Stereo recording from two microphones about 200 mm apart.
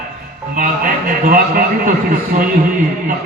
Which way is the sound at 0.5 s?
45° right (ahead or behind).